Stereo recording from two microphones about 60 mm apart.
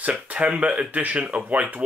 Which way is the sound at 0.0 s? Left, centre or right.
Right.